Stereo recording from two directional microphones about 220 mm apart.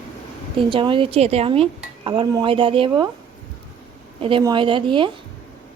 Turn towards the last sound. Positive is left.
turn(degrees=-20)  # may be behind; listen again after turning